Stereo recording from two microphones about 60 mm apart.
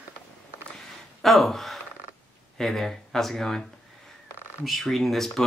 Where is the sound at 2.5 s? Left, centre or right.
Centre.